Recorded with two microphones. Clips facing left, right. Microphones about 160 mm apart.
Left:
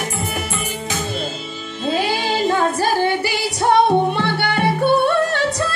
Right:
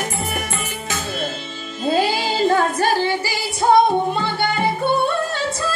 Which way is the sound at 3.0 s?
65° left (ahead or behind).